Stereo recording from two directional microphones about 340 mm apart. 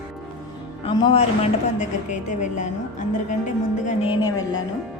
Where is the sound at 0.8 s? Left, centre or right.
Centre.